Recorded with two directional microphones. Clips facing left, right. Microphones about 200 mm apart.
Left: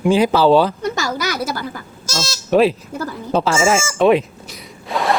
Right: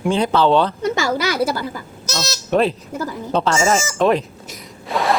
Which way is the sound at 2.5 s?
Centre (ahead or behind).